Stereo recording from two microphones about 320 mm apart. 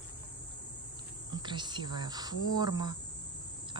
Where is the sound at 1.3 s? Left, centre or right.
Centre.